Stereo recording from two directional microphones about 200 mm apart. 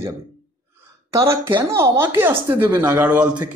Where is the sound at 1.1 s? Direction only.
15° right (ahead or behind).